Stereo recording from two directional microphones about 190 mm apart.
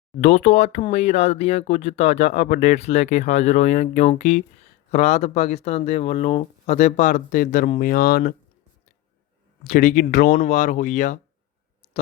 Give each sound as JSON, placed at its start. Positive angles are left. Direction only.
{"t": 0.2, "sound": "speech", "side_deg": 35}
{"t": 9.6, "sound": "speech", "side_deg": 40}